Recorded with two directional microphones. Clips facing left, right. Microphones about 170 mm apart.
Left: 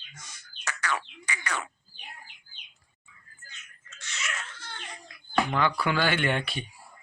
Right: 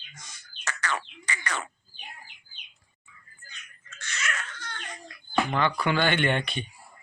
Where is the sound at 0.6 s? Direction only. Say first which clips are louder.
Even; 10° left (ahead or behind).